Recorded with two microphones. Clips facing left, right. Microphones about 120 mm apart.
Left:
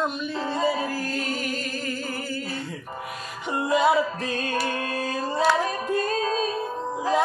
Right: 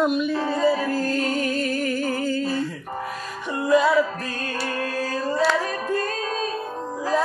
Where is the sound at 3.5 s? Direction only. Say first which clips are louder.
Right 2 dB; 25° left (ahead or behind).